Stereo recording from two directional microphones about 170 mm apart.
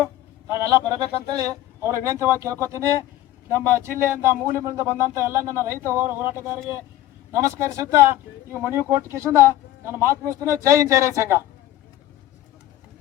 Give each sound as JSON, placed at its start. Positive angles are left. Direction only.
{"t": 0.0, "sound": "a man's voice", "side_deg": -15}